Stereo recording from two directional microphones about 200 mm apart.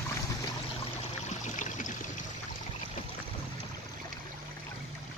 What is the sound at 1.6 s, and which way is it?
Stream, 40° left (ahead or behind).